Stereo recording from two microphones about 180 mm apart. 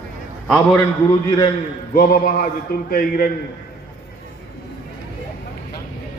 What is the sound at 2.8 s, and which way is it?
Speech, 55° left (ahead or behind).